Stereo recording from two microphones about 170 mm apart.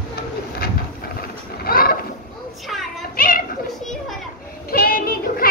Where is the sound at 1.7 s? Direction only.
60° left (ahead or behind).